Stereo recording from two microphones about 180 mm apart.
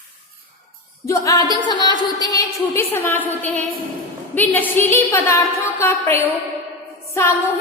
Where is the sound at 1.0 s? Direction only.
15° left (ahead or behind).